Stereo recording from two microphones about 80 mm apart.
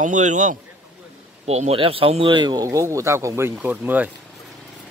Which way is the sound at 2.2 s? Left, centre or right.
Right.